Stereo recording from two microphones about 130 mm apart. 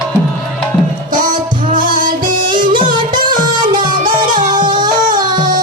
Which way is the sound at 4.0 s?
90° right.